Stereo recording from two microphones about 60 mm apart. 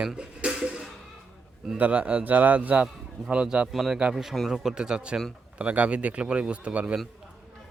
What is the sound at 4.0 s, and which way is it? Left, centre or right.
A man's voice, centre.